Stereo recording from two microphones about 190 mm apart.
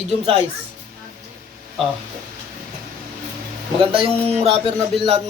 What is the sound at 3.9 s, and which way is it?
Speech, 30° right (ahead or behind).